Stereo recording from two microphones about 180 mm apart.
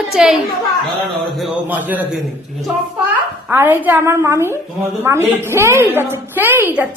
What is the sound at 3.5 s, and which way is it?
A woman's voice, 10° right (ahead or behind).